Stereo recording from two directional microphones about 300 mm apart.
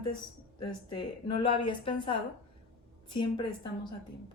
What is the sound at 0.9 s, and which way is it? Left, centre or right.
Speech, centre.